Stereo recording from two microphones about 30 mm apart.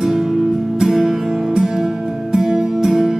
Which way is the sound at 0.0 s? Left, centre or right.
Centre.